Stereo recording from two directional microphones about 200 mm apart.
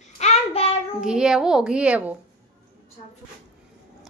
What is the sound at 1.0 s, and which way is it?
A woman's voice, 5° right (ahead or behind).